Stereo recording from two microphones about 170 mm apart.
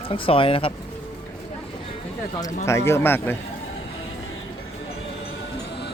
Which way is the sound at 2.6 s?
15° left (ahead or behind).